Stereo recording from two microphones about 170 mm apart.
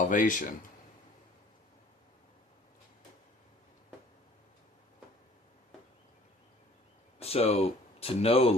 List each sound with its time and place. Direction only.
0.1 s speech: 50° left (ahead or behind)
7.2 s speech: 35° left (ahead or behind)